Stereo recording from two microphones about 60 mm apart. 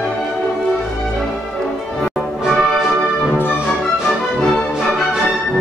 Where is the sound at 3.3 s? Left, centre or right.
Left.